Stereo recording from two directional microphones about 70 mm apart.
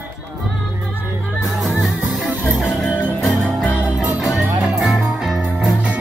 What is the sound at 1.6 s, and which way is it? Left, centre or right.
Music, centre.